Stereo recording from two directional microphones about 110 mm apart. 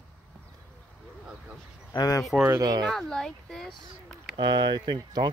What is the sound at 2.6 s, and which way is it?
Speech, 40° right (ahead or behind).